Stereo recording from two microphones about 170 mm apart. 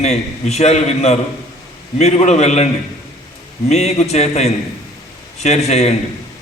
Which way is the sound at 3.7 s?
40° left (ahead or behind).